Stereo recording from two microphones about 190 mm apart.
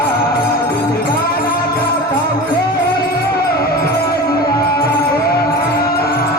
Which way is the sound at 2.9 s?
55° left (ahead or behind).